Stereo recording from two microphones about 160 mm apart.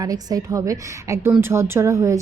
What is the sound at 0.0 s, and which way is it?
A woman's voice, 25° right (ahead or behind).